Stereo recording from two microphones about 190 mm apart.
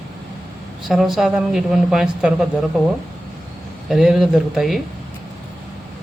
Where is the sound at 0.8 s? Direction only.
Centre (ahead or behind).